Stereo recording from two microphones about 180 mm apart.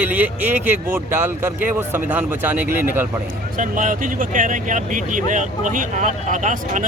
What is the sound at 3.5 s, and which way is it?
Speech, 45° right (ahead or behind).